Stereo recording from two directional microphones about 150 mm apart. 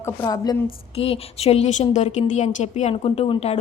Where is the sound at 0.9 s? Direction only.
40° left (ahead or behind).